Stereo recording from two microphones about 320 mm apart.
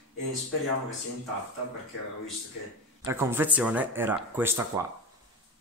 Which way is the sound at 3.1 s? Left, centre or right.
Centre.